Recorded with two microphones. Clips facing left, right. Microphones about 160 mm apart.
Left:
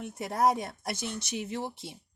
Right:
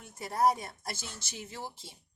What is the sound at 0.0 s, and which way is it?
Speech, 65° left (ahead or behind).